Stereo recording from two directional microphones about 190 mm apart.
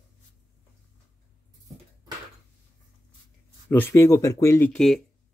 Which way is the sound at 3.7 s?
10° left (ahead or behind).